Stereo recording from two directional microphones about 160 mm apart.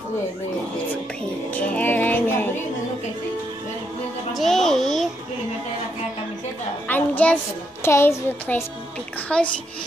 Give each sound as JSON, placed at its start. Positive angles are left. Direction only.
{"t": 1.5, "sound": "music", "side_deg": 10}
{"t": 4.4, "sound": "music", "side_deg": 0}
{"t": 6.9, "sound": "a sound", "side_deg": 10}
{"t": 7.8, "sound": "speech", "side_deg": 15}
{"t": 9.3, "sound": "a child's voice", "side_deg": 5}